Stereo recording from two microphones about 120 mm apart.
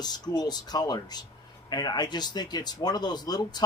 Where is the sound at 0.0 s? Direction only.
35° left (ahead or behind).